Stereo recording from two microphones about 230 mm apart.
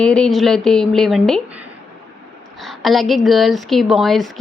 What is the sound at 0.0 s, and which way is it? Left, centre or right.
Speech, centre.